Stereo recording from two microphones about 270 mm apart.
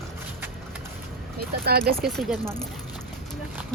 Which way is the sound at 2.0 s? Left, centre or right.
Centre.